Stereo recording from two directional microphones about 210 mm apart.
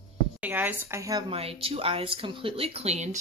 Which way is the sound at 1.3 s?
25° right (ahead or behind).